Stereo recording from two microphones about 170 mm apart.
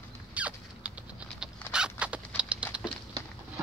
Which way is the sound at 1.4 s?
5° right (ahead or behind).